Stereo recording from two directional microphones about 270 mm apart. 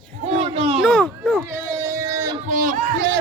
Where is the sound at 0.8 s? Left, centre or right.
Centre.